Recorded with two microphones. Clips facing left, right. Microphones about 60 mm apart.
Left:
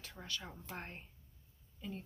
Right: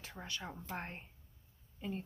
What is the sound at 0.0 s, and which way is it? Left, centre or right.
Speech, right.